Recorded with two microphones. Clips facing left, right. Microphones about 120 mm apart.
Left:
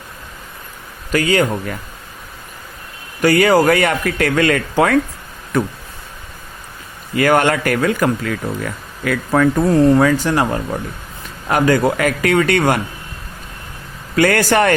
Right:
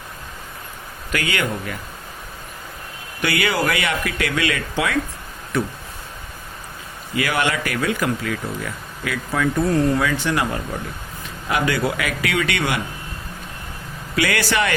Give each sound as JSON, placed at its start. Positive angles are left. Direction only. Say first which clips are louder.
{"t": 1.1, "sound": "speech", "louder": "left 8 dB", "side_deg": 35}
{"t": 3.2, "sound": "speech", "louder": "left 9 dB", "side_deg": 40}
{"t": 7.2, "sound": "speech", "louder": "left 8 dB", "side_deg": 45}
{"t": 14.2, "sound": "speech", "louder": "left 7 dB", "side_deg": 45}